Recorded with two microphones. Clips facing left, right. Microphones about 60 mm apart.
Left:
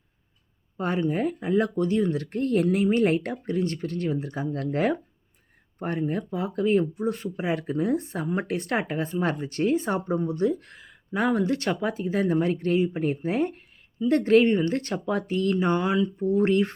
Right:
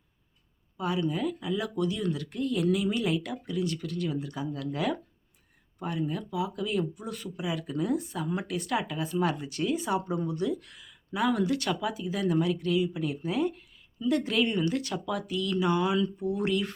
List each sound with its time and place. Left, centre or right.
0.8 s speech: left